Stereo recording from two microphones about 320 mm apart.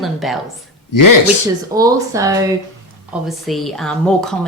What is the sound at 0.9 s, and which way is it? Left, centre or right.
Speech, left.